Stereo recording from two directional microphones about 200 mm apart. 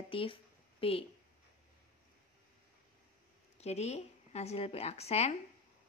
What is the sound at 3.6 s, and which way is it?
A woman's voice, 35° left (ahead or behind).